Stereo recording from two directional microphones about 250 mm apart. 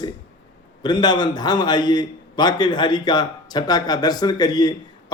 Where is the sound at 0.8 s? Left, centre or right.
Centre.